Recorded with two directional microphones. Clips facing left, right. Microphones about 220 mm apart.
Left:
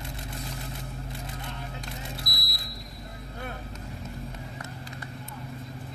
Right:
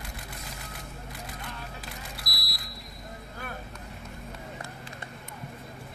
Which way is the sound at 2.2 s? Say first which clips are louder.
Left 3 dB; 25° left (ahead or behind).